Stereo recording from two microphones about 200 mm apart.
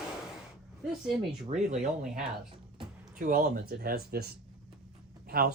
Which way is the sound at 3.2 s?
45° right (ahead or behind).